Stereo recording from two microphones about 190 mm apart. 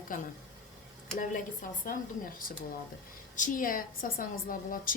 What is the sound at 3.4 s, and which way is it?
A woman's voice, 45° left (ahead or behind).